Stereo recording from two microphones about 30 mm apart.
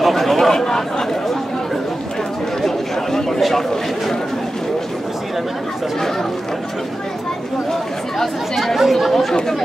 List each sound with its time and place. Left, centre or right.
0.0 s chatter: centre
0.6 s speech: centre
2.6 s chatter: centre
8.7 s chatter: centre